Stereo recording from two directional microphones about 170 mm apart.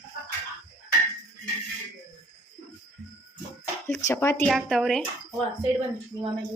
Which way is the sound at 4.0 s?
15° left (ahead or behind).